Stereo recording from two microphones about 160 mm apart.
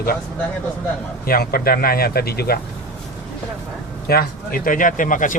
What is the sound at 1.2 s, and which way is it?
Speech, 70° left (ahead or behind).